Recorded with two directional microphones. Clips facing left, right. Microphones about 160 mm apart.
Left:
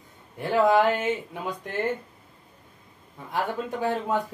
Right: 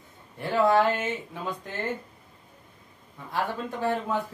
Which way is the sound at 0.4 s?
15° left (ahead or behind).